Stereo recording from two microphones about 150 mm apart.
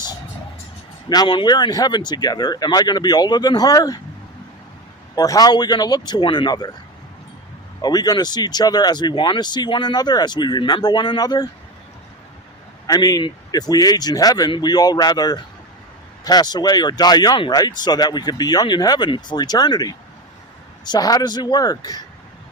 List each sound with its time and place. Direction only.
1.1 s speech: 30° left (ahead or behind)
5.1 s speech: 25° left (ahead or behind)
7.8 s speech: 25° left (ahead or behind)
12.9 s speech: 25° left (ahead or behind)